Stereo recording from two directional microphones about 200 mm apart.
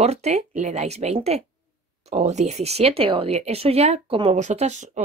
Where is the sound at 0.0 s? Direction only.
35° right (ahead or behind).